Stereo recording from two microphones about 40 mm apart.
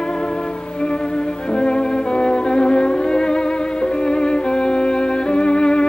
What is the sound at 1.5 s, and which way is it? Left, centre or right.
Music, left.